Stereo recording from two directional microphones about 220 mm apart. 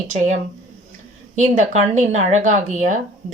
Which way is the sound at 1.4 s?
35° right (ahead or behind).